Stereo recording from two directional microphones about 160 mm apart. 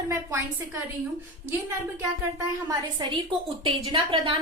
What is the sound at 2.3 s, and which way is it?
Speech, 20° right (ahead or behind).